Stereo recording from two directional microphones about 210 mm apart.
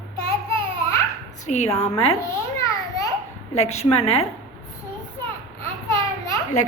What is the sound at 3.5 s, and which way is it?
Speech, 30° left (ahead or behind).